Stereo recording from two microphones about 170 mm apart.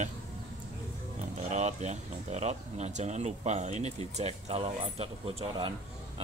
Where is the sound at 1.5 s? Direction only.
45° right (ahead or behind).